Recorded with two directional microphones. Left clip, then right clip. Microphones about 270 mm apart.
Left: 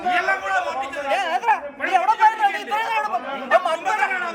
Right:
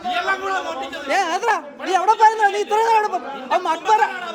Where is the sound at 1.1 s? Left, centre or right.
Centre.